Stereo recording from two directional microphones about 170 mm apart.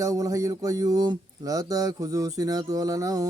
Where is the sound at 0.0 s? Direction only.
20° right (ahead or behind).